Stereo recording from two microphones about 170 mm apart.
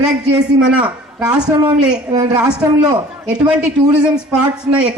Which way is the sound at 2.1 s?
25° right (ahead or behind).